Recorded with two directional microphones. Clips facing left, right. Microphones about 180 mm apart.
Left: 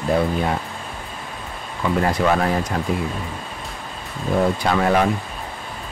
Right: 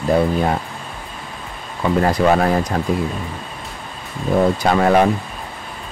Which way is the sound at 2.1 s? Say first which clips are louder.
Right 4 dB; 35° right (ahead or behind).